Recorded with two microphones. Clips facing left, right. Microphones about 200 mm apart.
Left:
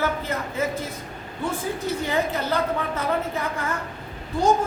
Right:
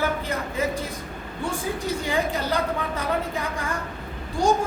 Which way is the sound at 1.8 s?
15° right (ahead or behind).